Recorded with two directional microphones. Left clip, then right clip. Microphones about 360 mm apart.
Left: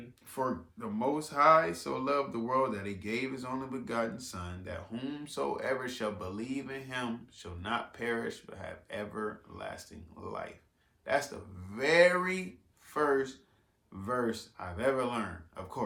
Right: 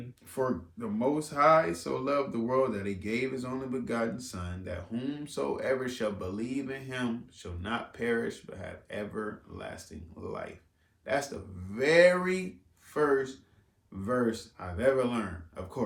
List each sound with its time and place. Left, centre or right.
0.3 s speech: centre